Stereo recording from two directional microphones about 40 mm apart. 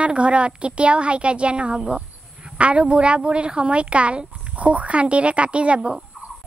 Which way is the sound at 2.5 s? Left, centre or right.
Right.